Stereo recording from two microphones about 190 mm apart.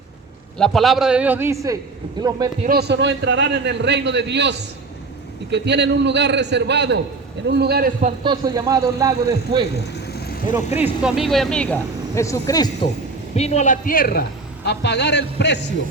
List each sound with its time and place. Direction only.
0.6 s a man's voice: centre (ahead or behind); by 2.3 s 20° right (ahead or behind)
2.6 s a man's voice: 60° right (ahead or behind)
8.2 s a man's voice: 20° right (ahead or behind)
9.7 s vehicle: 55° left (ahead or behind)
10.8 s speech: 5° right (ahead or behind); by 12.9 s 20° left (ahead or behind)
13.3 s a man's voice: 35° left (ahead or behind); by 15.5 s 65° left (ahead or behind)